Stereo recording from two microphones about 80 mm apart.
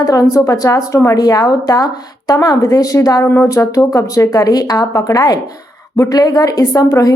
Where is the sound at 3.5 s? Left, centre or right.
Left.